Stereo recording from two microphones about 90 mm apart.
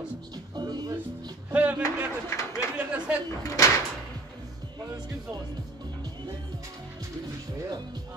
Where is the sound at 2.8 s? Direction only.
15° right (ahead or behind).